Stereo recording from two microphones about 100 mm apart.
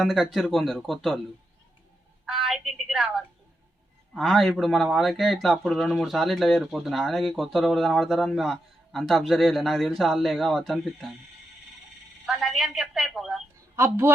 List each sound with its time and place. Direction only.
0.0 s speech: 5° left (ahead or behind)
2.2 s a woman's voice: centre (ahead or behind)
12.2 s a woman's voice: centre (ahead or behind)
13.7 s a woman's voice: 25° right (ahead or behind)